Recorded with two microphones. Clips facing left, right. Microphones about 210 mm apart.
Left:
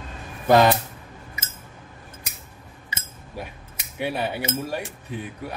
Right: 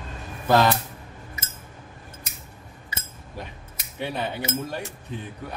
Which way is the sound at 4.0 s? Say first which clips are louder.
Left 3 dB; 10° left (ahead or behind).